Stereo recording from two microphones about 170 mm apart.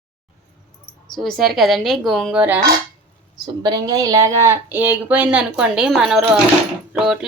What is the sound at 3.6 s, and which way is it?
Speech, 25° right (ahead or behind).